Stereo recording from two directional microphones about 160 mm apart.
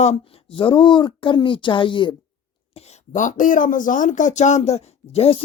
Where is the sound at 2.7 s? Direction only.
40° left (ahead or behind).